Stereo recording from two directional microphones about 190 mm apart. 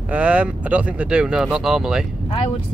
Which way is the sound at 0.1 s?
5° right (ahead or behind).